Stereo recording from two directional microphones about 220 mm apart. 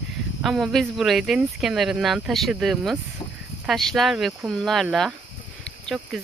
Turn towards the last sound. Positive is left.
turn(degrees=5)  # may be behind; listen again after turning